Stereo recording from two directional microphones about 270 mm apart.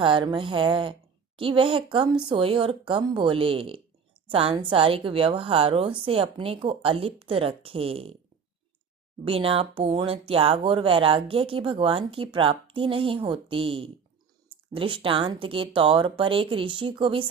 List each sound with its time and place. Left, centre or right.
0.0 s speech: centre
9.2 s speech: centre